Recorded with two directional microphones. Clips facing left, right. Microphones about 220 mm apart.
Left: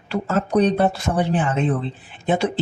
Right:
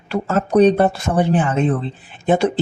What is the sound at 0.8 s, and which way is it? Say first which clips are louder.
Speech: right 3 dB; 50° right (ahead or behind).